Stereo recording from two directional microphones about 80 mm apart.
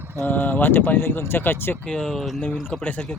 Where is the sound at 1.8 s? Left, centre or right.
Centre.